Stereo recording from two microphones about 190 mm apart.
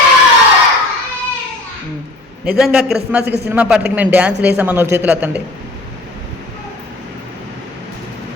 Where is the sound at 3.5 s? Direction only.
10° right (ahead or behind).